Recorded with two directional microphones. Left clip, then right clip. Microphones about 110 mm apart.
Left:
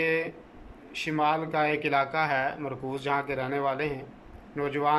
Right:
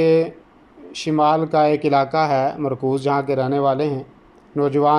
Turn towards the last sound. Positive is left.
turn(degrees=-35)  # may be behind; listen again after turning